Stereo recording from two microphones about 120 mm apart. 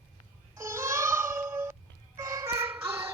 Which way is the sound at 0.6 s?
20° right (ahead or behind).